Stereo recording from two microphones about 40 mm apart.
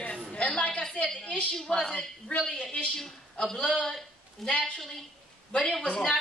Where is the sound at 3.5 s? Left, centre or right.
Left.